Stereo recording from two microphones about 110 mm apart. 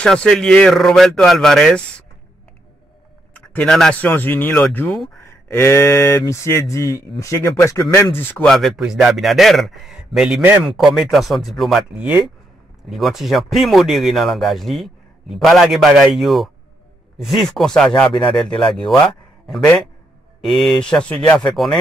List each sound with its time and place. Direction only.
0.0 s speech: 5° left (ahead or behind)
3.3 s a sound: 10° left (ahead or behind)
4.0 s speech: 15° left (ahead or behind)
8.5 s speech: centre (ahead or behind); by 10.7 s 15° right (ahead or behind)
10.8 s a man's voice: centre (ahead or behind)